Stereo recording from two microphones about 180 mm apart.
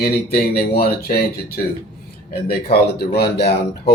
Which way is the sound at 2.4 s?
60° left (ahead or behind).